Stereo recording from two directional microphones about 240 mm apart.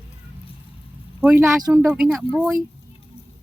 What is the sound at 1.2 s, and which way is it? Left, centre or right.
Speech, centre.